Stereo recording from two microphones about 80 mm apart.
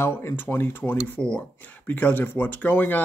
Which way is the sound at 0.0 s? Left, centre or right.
Left.